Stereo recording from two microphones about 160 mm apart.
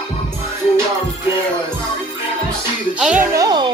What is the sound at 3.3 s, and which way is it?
Speech, 25° right (ahead or behind).